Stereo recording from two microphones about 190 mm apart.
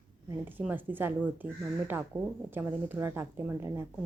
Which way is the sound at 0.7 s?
10° right (ahead or behind).